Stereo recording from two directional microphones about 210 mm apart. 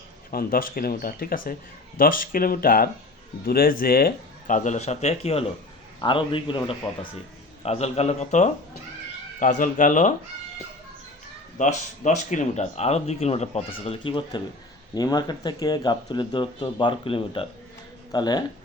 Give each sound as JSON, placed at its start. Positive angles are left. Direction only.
{"t": 0.3, "sound": "speech", "side_deg": 45}
{"t": 11.5, "sound": "speech", "side_deg": 35}